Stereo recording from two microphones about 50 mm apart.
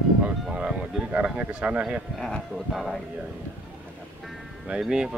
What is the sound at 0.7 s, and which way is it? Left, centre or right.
Speech, right.